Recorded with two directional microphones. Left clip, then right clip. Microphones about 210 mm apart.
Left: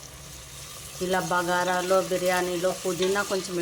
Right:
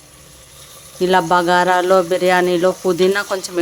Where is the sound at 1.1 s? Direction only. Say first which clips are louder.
Right 11 dB; 55° right (ahead or behind).